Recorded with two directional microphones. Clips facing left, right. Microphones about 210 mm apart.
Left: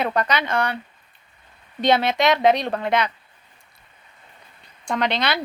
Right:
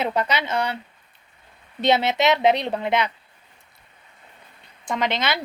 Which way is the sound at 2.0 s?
20° right (ahead or behind).